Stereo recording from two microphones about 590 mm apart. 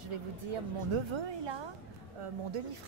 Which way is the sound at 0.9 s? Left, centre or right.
Right.